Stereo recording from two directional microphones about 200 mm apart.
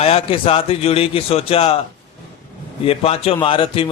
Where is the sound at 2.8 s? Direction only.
30° left (ahead or behind).